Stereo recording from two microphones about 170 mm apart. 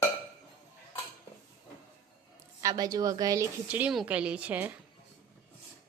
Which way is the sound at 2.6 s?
20° right (ahead or behind).